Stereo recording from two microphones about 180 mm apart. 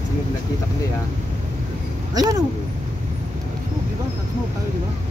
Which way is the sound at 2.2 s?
20° right (ahead or behind).